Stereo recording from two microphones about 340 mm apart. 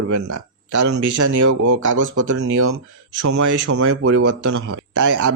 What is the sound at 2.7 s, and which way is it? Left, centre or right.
Speech, right.